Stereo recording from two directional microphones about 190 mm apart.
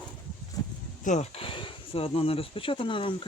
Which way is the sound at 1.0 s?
40° left (ahead or behind).